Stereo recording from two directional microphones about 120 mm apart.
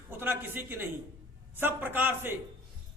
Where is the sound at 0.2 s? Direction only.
15° right (ahead or behind).